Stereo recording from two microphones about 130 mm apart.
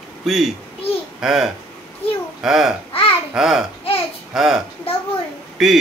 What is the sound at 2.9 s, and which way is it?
Babbling, 45° left (ahead or behind).